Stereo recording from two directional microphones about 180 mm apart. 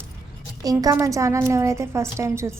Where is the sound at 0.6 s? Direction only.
20° right (ahead or behind).